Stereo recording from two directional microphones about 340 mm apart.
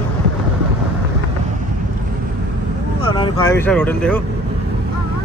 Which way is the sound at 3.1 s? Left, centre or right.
Centre.